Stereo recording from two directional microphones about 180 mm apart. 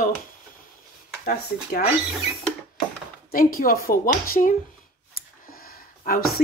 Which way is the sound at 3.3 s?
50° left (ahead or behind).